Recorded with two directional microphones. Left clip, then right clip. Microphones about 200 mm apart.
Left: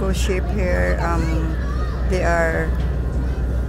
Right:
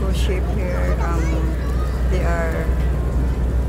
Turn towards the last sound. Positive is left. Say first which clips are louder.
# left 5 dB
turn(degrees=20)  # may be behind; listen again after turning